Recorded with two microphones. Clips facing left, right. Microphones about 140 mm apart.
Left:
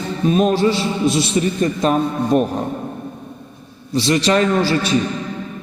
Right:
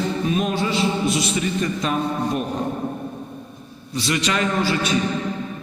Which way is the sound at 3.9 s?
30° left (ahead or behind).